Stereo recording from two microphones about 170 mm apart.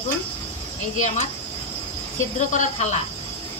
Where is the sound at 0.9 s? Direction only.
45° left (ahead or behind).